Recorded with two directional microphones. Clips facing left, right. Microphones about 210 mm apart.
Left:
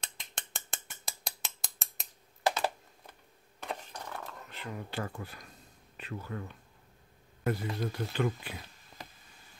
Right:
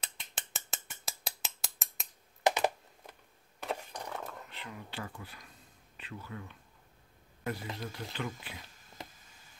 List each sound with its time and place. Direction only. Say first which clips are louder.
0.0 s mechanisms: left 1 dB; 5° right (ahead or behind)
2.4 s computer keyboard: right 2 dB; 15° right (ahead or behind)
4.0 s a sound: right 2 dB; 15° right (ahead or behind)
4.5 s speech: left 5 dB; 45° left (ahead or behind)